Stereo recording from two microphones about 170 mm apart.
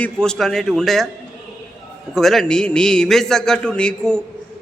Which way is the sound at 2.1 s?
Centre (ahead or behind).